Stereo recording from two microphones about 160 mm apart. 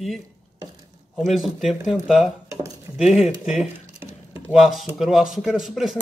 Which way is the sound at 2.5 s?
20° right (ahead or behind).